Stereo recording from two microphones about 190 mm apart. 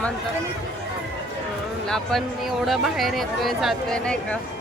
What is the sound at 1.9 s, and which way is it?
Speech, centre (ahead or behind).